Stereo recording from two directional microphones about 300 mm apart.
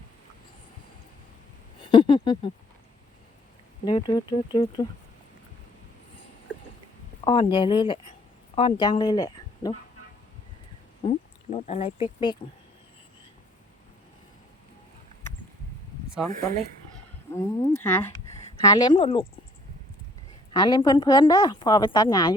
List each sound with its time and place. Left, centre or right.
1.8 s speech: centre
3.8 s a woman's voice: centre
7.3 s a woman's voice: centre
11.0 s speech: left
17.3 s a woman's voice: centre
20.5 s a woman's voice: centre